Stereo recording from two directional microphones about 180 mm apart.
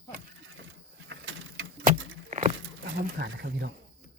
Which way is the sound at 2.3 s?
40° right (ahead or behind).